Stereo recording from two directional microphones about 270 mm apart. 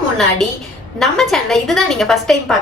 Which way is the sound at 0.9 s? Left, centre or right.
Centre.